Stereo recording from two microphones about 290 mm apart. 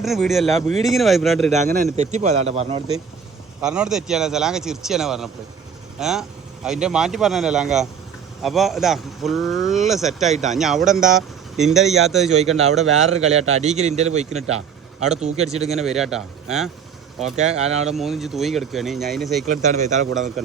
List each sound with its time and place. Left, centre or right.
0.0 s speech: centre
1.5 s a man's voice: right
3.6 s speech: centre
12.3 s a man's voice: right
15.8 s speech: centre
17.3 s a man's voice: right
17.8 s speech: centre
19.5 s a man's voice: right